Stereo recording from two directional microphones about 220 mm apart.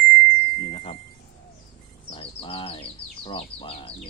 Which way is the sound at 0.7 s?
30° left (ahead or behind).